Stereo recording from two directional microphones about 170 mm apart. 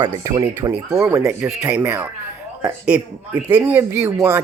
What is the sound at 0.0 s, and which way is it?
Speech, 25° right (ahead or behind).